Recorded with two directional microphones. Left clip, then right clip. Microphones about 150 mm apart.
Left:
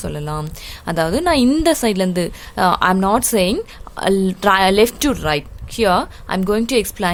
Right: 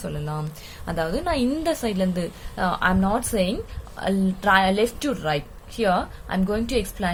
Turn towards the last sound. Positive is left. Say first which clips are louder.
# left 7 dB
turn(degrees=80)